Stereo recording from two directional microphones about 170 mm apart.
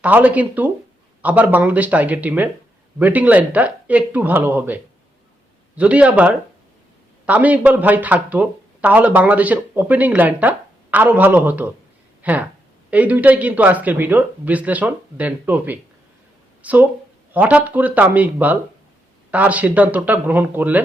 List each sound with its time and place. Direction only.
0.0 s speech: 10° right (ahead or behind)